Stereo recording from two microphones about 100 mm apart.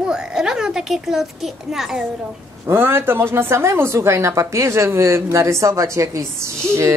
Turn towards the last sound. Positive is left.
turn(degrees=-30)  # may be behind; listen again after turning